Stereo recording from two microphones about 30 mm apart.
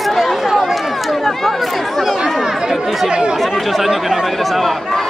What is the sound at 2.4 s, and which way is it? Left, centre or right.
Speech, centre.